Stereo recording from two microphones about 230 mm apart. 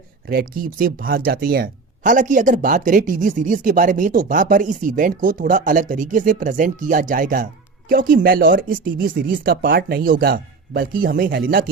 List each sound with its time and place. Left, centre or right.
0.3 s speech: right